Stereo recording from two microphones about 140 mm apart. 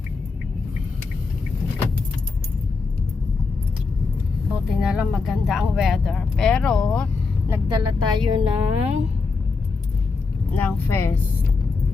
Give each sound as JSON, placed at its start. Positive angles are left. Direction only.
{"t": 4.7, "sound": "speech", "side_deg": -5}
{"t": 7.7, "sound": "a woman's voice", "side_deg": -35}
{"t": 10.5, "sound": "speech", "side_deg": 15}